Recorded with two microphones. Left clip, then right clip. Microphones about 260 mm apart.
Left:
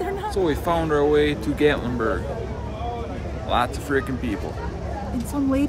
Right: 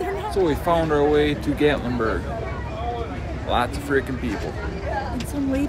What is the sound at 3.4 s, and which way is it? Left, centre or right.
Speech, centre.